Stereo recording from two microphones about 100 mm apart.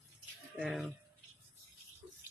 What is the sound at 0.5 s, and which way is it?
Speech, 5° right (ahead or behind).